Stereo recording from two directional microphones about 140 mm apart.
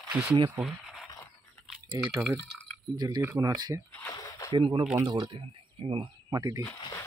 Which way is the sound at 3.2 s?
20° right (ahead or behind).